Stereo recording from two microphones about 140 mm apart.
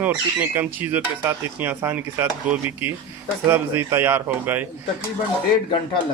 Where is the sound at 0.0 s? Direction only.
10° right (ahead or behind).